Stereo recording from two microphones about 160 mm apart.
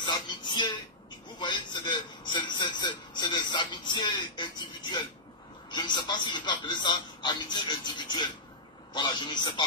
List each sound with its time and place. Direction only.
0.0 s speech: 30° left (ahead or behind)
1.4 s a sound: 30° left (ahead or behind)
5.7 s a man's voice: 30° left (ahead or behind)